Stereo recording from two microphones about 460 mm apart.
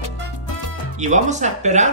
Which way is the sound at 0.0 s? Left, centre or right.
Left.